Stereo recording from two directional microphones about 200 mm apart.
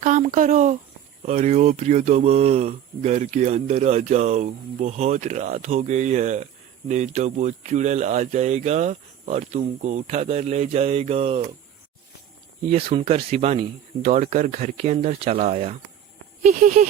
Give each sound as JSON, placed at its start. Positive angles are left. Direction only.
{"t": 0.0, "sound": "speech", "side_deg": -40}
{"t": 12.7, "sound": "speech", "side_deg": -30}